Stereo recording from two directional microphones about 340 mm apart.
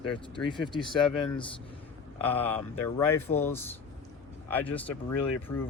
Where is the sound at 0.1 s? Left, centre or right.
Centre.